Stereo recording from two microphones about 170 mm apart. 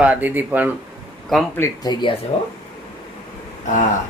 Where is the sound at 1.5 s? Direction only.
20° left (ahead or behind).